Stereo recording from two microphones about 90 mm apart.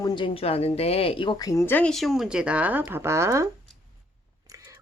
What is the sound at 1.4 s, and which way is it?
Speech, 40° left (ahead or behind).